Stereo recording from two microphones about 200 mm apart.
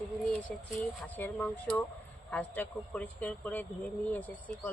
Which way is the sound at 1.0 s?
10° left (ahead or behind).